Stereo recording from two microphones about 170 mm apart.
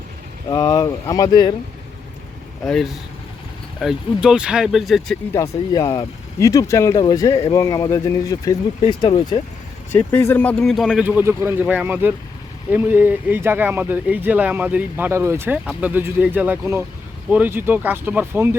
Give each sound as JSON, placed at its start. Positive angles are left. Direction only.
{"t": 0.5, "sound": "speech", "side_deg": 20}
{"t": 3.8, "sound": "speech", "side_deg": -5}
{"t": 5.3, "sound": "speech", "side_deg": 15}
{"t": 9.9, "sound": "speech", "side_deg": 10}